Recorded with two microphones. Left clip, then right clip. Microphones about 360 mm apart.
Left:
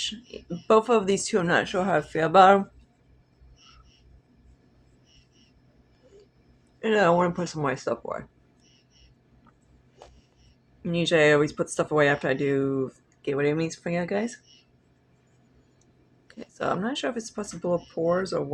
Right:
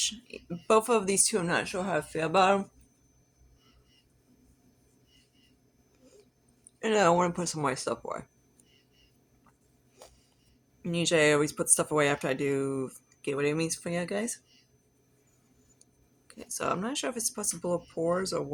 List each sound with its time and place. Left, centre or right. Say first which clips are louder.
0.0 s speech: left 1 dB; right
6.8 s speech: left 3 dB; right
10.8 s speech: left 4 dB; right
16.2 s speech: left 3 dB; right